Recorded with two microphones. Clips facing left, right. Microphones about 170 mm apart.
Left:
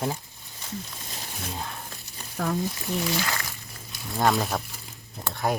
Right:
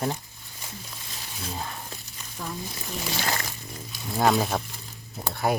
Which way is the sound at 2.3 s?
65° left (ahead or behind).